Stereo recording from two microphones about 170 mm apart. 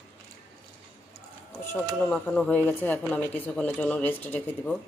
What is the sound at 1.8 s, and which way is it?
Speech, 5° left (ahead or behind).